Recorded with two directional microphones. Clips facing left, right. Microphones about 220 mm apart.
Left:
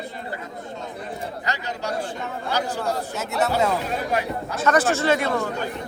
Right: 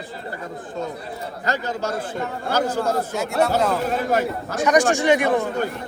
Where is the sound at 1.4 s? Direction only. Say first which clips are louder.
Right 5 dB; 45° right (ahead or behind).